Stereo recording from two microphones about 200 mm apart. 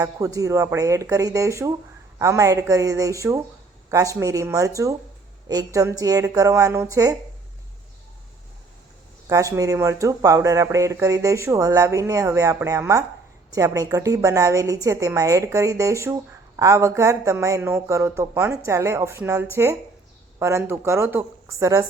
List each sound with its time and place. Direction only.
0.0 s a woman's voice: 15° right (ahead or behind)
9.3 s a woman's voice: 15° right (ahead or behind)